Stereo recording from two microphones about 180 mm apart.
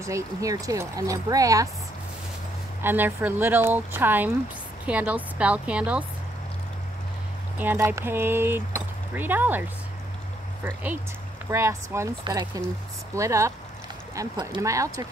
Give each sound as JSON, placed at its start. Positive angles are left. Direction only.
{"t": 0.0, "sound": "speech", "side_deg": -15}
{"t": 2.8, "sound": "speech", "side_deg": -10}
{"t": 7.5, "sound": "speech", "side_deg": -10}